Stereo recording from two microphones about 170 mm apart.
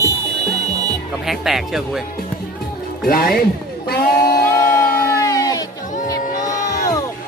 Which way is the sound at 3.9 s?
65° left (ahead or behind).